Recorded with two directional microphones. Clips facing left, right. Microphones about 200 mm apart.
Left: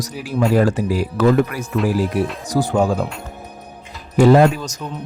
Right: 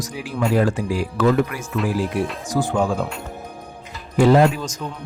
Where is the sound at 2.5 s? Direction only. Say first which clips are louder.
Left 3 dB; 40° left (ahead or behind).